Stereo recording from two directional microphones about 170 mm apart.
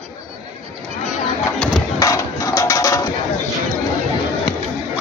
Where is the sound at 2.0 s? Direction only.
20° left (ahead or behind).